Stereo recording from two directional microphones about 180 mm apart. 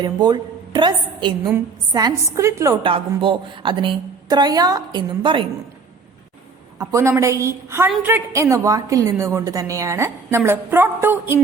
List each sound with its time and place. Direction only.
0.0 s a woman's voice: 25° right (ahead or behind)
2.8 s a woman's voice: 30° right (ahead or behind)
6.7 s a woman's voice: 15° right (ahead or behind)